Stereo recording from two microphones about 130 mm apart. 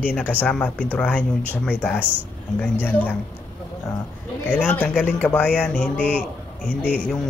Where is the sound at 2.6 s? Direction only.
15° left (ahead or behind).